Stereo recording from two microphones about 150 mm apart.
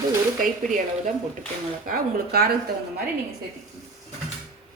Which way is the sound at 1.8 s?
80° right.